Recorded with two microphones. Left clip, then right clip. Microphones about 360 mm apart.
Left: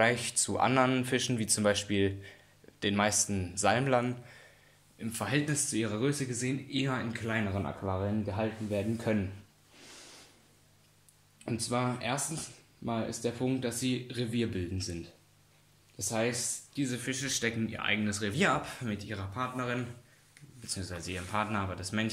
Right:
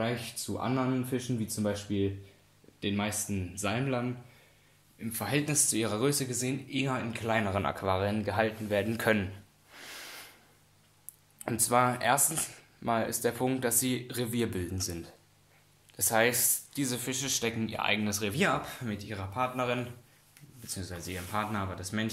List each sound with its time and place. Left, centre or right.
0.0 s speech: centre
4.9 s speech: centre
7.6 s speech: right
9.8 s snort: right
11.4 s speech: centre